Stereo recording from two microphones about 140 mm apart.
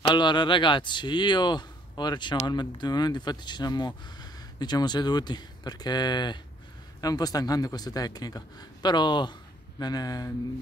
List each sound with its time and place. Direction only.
0.1 s a man's voice: 35° left (ahead or behind)